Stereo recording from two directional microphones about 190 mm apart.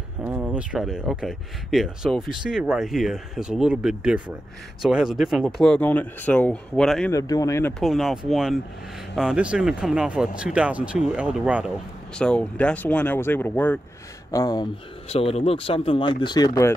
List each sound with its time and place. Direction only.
0.2 s speech: 5° right (ahead or behind)
7.1 s speech: 20° left (ahead or behind)
7.8 s speech: centre (ahead or behind)
12.2 s speech: 5° left (ahead or behind)
14.3 s speech: 20° left (ahead or behind)
15.0 s speech: 35° left (ahead or behind)